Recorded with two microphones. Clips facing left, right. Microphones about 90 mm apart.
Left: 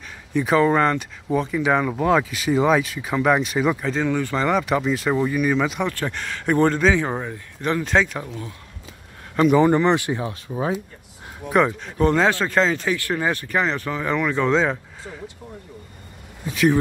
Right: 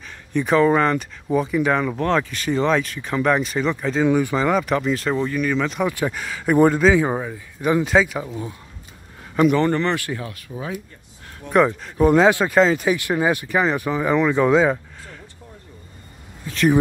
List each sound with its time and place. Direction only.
0.3 s speech: centre (ahead or behind)
4.1 s speech: 15° right (ahead or behind)
4.5 s speech: centre (ahead or behind)
5.9 s speech: 5° right (ahead or behind)
8.3 s speech: 15° right (ahead or behind)
9.3 s speech: centre (ahead or behind)
9.6 s speech: 15° left (ahead or behind)
11.4 s speech: centre (ahead or behind)
12.1 s speech: 15° right (ahead or behind)